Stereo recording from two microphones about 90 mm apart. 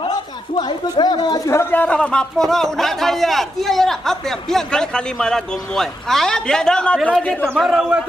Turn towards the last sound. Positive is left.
turn(degrees=-5)  # may be behind; listen again after turning